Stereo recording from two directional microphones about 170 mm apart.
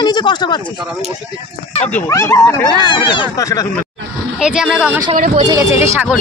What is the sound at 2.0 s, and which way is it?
A woman's voice, 15° left (ahead or behind).